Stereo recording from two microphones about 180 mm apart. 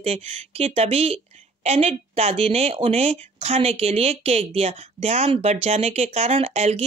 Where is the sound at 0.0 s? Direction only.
35° right (ahead or behind).